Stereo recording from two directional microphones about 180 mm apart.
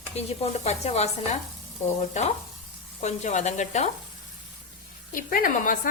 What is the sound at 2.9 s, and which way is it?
Sizzle, 40° left (ahead or behind).